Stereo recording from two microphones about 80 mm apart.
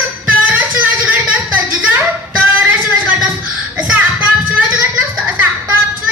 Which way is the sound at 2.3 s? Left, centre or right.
Right.